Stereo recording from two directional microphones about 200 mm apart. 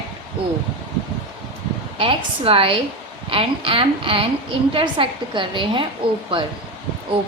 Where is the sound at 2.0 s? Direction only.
25° right (ahead or behind).